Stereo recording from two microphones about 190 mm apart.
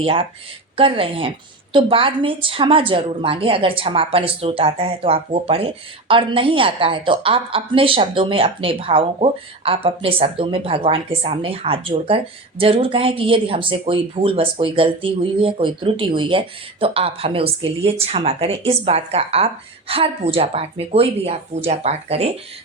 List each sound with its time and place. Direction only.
0.0 s a woman's voice: 30° right (ahead or behind)